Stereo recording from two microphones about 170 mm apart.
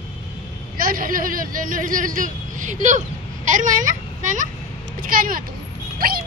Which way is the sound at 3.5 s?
50° right (ahead or behind).